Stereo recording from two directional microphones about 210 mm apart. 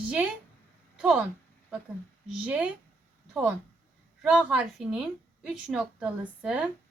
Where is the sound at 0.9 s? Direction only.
5° right (ahead or behind).